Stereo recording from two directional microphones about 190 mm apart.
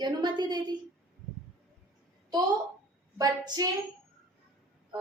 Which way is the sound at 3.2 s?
20° right (ahead or behind).